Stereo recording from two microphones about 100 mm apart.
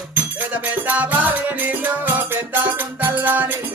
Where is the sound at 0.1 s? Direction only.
15° right (ahead or behind).